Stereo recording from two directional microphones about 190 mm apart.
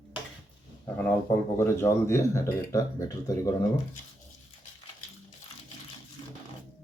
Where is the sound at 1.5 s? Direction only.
15° left (ahead or behind).